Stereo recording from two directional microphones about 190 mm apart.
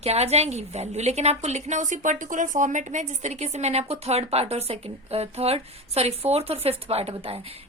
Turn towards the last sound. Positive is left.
turn(degrees=-30)  # may be behind; listen again after turning